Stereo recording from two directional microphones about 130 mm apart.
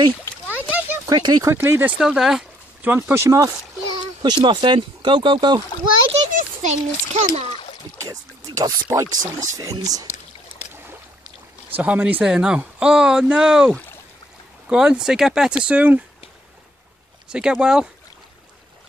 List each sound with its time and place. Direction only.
0.5 s a sound: 10° right (ahead or behind)
1.0 s speech: 30° right (ahead or behind)
1.5 s speech: 20° right (ahead or behind); by 5.6 s 40° right (ahead or behind)
6.3 s a child's voice: 65° right (ahead or behind)
8.1 s speech: 25° right (ahead or behind)
11.7 s speech: 10° right (ahead or behind)
17.3 s speech: 5° right (ahead or behind)